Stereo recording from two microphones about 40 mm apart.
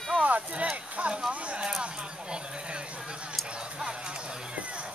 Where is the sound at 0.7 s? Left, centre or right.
Right.